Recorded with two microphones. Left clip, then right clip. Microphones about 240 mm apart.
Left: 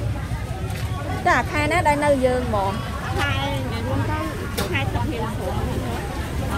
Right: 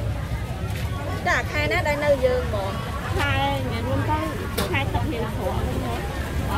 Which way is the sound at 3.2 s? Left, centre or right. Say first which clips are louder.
Right 1 dB; right.